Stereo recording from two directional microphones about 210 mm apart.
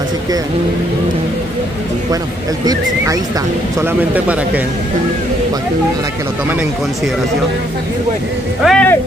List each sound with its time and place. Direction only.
2.6 s speech: 15° right (ahead or behind)
8.6 s speech: 5° left (ahead or behind)